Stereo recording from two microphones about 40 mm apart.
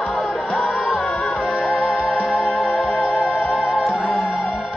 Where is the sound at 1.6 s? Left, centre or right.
Centre.